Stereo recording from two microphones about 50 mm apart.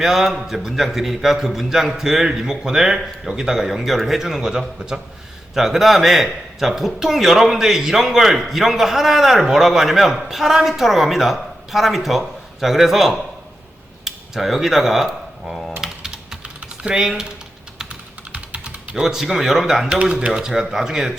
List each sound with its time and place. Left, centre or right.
0.0 s a man's voice: centre
15.8 s typing: centre
18.3 s typing: right
19.0 s speech: centre